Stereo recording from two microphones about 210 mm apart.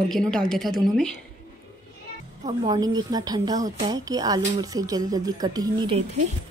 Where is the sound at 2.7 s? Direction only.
20° right (ahead or behind).